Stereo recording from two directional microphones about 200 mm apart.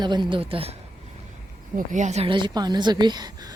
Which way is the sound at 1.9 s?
35° right (ahead or behind).